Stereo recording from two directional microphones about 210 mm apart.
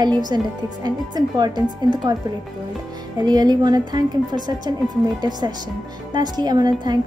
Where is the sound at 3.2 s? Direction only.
20° right (ahead or behind).